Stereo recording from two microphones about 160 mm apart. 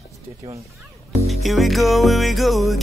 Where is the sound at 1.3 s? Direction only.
Centre (ahead or behind).